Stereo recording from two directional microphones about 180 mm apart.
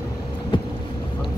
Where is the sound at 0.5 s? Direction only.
25° left (ahead or behind).